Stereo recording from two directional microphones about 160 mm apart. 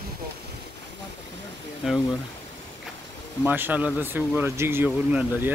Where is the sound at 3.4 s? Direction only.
10° right (ahead or behind).